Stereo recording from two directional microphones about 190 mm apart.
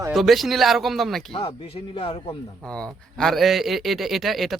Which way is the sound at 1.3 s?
30° left (ahead or behind).